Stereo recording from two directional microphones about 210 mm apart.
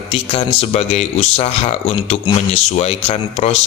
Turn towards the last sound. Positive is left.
turn(degrees=30)  # may be behind; listen again after turning